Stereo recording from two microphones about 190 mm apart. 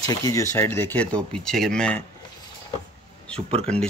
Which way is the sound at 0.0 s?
20° left (ahead or behind).